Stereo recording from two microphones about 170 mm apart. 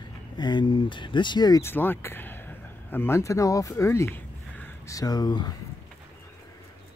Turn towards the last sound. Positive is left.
turn(degrees=25)  # may be behind; listen again after turning